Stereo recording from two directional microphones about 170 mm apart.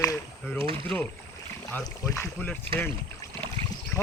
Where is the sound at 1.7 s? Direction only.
15° left (ahead or behind).